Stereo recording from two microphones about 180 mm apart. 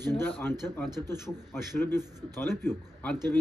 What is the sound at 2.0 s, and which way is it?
Speech, 20° right (ahead or behind).